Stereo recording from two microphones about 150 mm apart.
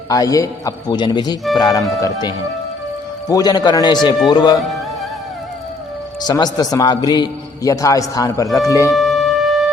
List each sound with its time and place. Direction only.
0.1 s a man's voice: 25° left (ahead or behind)
6.2 s a man's voice: 25° left (ahead or behind)
8.9 s wind instrument: centre (ahead or behind)